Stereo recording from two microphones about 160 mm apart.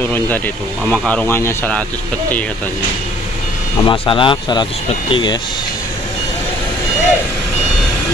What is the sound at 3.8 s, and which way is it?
Speech, 30° left (ahead or behind).